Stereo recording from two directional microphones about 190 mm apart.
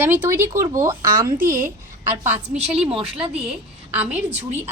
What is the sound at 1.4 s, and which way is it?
Speech, 45° right (ahead or behind).